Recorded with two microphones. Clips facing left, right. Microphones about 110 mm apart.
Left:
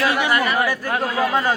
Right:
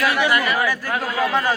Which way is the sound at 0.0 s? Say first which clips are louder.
Even; 25° left (ahead or behind).